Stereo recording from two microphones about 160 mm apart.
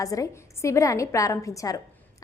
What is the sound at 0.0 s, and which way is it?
A woman's voice, 20° left (ahead or behind).